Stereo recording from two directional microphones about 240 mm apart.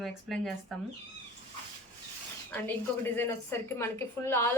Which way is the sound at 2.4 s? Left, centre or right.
Centre.